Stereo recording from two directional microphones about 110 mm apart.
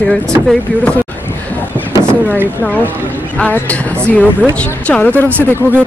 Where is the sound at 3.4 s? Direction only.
15° left (ahead or behind).